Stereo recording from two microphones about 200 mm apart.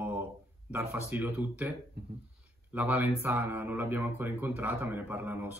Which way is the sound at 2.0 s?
50° right (ahead or behind).